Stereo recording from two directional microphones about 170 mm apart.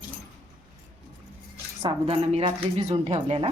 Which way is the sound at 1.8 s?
35° right (ahead or behind).